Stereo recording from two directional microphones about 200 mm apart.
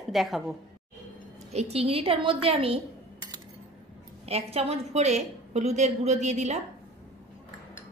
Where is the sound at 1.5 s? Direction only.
30° right (ahead or behind).